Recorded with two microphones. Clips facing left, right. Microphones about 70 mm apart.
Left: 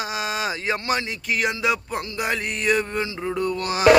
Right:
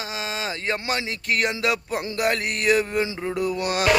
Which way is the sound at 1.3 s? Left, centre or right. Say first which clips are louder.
Even; centre.